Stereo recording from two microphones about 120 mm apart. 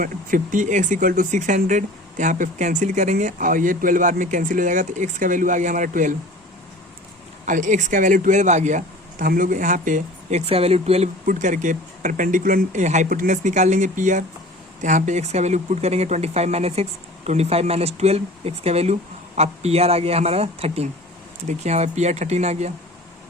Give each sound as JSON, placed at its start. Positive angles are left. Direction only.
{"t": 0.5, "sound": "speech", "side_deg": -90}
{"t": 7.4, "sound": "speech", "side_deg": -90}
{"t": 21.4, "sound": "speech", "side_deg": -70}